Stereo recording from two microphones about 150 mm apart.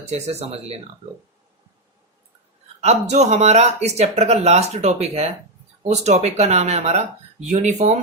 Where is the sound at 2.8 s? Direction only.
45° right (ahead or behind).